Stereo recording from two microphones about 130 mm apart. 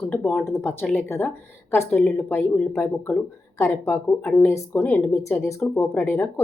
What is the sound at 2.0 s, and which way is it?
Speech, 5° left (ahead or behind).